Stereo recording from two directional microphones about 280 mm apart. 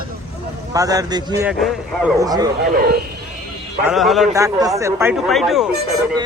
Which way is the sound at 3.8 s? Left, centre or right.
Centre.